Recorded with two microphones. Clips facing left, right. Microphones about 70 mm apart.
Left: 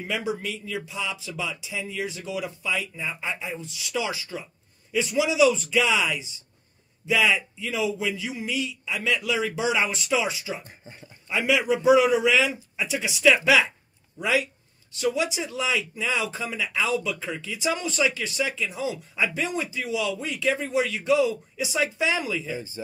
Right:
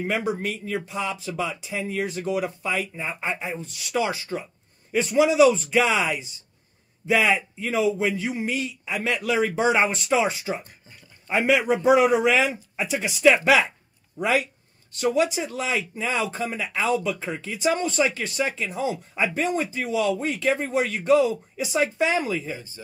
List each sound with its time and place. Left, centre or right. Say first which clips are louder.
0.0 s speech: right 3 dB; right
10.6 s speech: left 3 dB; left
11.2 s speech: right 2 dB; right